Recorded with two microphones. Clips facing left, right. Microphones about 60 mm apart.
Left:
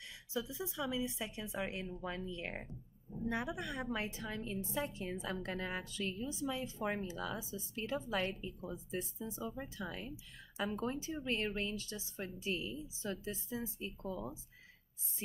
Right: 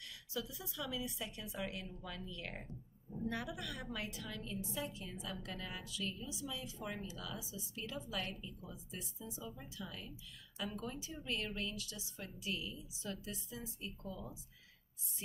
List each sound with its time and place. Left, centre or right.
0.3 s a woman's voice: left